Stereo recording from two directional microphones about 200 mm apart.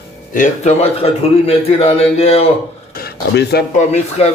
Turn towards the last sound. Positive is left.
turn(degrees=35)  # may be behind; listen again after turning